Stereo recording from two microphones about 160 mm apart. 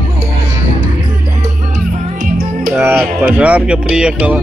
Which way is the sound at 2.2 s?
60° right (ahead or behind).